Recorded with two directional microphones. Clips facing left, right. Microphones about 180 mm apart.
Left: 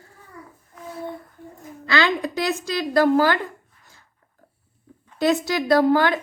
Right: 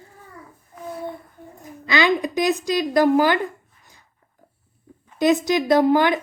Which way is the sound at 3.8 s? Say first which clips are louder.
Even; 15° right (ahead or behind).